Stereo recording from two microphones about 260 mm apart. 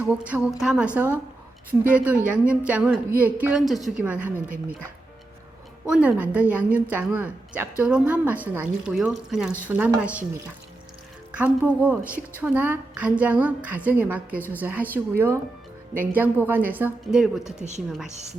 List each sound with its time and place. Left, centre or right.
0.0 s a woman's voice: centre
5.9 s a woman's voice: centre
17.6 s speech: right